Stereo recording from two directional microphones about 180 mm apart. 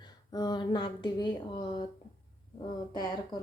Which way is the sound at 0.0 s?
25° left (ahead or behind).